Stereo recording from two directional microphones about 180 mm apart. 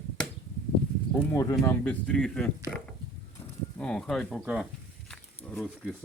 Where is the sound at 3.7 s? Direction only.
5° left (ahead or behind).